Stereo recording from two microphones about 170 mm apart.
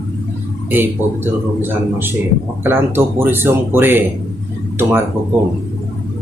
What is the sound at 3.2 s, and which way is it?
Speech, 15° right (ahead or behind).